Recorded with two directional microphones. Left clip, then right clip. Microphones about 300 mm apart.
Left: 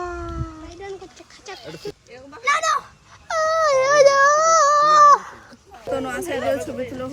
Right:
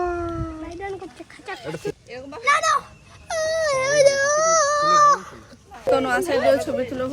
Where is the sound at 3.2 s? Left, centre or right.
Left.